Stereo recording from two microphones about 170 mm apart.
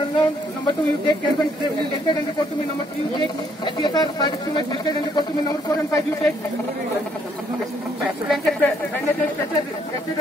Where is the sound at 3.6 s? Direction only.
25° left (ahead or behind).